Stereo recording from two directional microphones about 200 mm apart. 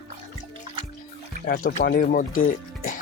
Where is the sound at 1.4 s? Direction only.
45° left (ahead or behind).